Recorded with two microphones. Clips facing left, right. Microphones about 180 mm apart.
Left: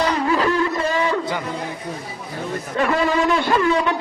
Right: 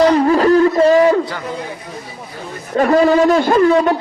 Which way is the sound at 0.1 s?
40° right (ahead or behind).